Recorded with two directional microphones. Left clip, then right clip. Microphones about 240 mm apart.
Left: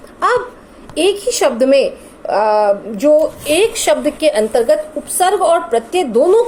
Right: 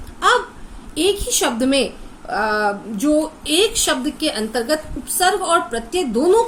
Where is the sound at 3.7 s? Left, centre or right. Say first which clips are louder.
Left 6 dB; right.